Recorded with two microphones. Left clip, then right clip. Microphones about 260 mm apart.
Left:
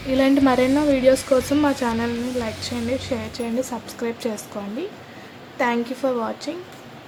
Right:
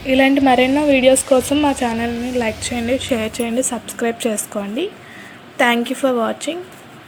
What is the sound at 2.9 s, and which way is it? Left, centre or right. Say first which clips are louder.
A woman's voice: right 8 dB; centre.